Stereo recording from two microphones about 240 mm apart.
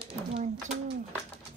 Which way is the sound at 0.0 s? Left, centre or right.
Right.